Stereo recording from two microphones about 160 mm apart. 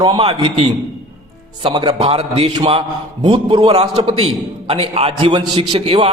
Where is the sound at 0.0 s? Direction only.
30° right (ahead or behind).